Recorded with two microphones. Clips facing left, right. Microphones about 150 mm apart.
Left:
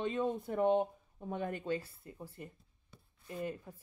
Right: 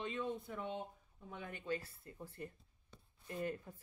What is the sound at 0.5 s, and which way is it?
Speech, 65° left (ahead or behind).